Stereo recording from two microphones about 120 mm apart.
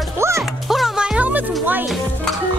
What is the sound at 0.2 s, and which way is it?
Music, 25° right (ahead or behind).